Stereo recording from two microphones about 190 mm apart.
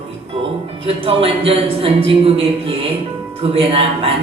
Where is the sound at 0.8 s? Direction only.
30° right (ahead or behind).